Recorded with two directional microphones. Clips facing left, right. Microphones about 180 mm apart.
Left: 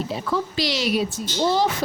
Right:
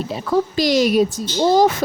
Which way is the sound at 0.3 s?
45° right (ahead or behind).